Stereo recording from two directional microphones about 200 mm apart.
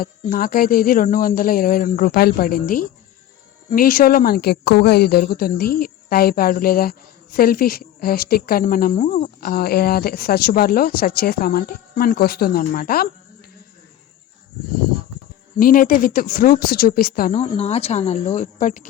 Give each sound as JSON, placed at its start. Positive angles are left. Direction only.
{"t": 0.0, "sound": "speech", "side_deg": 45}
{"t": 15.5, "sound": "speech", "side_deg": 45}
{"t": 17.3, "sound": "speech", "side_deg": 30}